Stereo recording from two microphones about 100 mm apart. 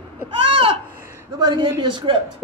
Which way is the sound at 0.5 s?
70° right (ahead or behind).